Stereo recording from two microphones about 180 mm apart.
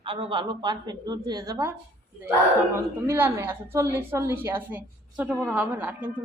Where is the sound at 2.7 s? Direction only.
15° right (ahead or behind).